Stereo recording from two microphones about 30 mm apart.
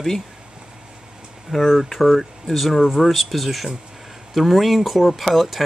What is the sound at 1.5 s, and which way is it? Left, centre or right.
Speech, centre.